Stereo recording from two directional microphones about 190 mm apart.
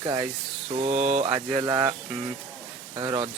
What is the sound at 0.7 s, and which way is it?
Mantra, 35° right (ahead or behind).